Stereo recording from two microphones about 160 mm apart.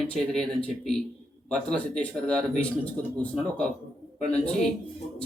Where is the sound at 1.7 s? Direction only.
5° left (ahead or behind).